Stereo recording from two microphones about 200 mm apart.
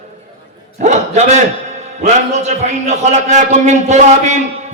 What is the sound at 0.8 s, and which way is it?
A man's voice, 35° right (ahead or behind).